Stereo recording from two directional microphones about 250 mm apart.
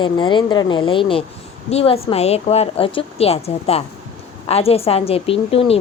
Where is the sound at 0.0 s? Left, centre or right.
Centre.